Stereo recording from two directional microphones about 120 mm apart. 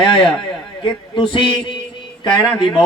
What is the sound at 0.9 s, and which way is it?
Speech, 45° left (ahead or behind).